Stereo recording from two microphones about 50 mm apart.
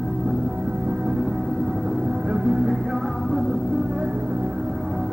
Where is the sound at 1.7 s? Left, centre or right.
Right.